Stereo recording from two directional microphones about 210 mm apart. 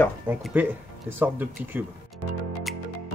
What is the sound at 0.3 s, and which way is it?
Speech, 5° right (ahead or behind).